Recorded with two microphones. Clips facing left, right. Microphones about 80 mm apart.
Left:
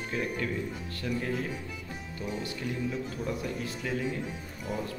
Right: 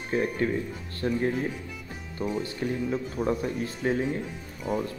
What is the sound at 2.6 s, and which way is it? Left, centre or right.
Speech, right.